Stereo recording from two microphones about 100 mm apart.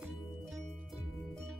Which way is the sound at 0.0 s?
5° right (ahead or behind).